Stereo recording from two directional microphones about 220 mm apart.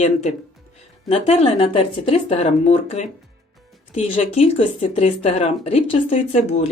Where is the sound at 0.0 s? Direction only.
30° left (ahead or behind).